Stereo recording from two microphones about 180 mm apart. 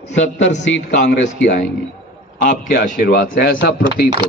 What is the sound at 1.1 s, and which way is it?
A man's voice, 45° left (ahead or behind).